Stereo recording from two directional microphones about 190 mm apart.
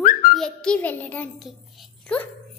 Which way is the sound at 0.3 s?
5° left (ahead or behind).